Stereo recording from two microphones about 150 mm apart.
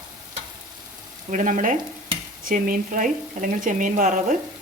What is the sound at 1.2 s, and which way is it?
A woman's voice, 60° right (ahead or behind).